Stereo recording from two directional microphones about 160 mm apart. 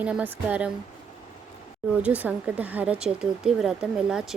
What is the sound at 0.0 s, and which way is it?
Speech, 10° right (ahead or behind).